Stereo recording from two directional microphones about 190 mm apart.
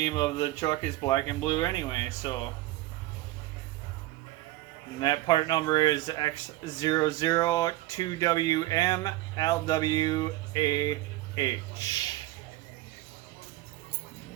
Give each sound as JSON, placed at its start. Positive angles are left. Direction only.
{"t": 0.0, "sound": "speech", "side_deg": 20}
{"t": 4.9, "sound": "speech", "side_deg": 20}